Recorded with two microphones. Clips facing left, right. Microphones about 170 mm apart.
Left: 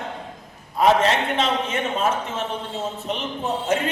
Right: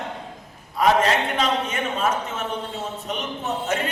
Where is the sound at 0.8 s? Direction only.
30° left (ahead or behind).